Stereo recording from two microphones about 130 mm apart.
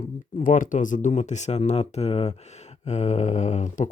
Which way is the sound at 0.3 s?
90° left.